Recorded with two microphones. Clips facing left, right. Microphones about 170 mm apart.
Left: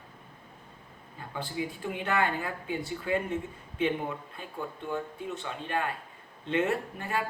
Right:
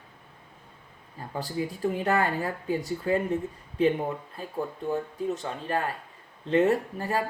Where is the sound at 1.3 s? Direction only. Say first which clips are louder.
Right 3 dB; 40° right (ahead or behind).